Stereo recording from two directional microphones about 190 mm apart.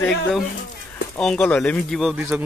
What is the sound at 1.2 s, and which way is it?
Speech, 5° left (ahead or behind).